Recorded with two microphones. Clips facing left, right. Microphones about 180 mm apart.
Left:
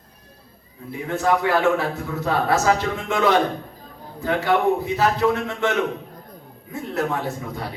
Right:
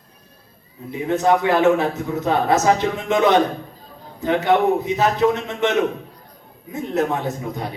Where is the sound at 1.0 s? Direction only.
20° right (ahead or behind).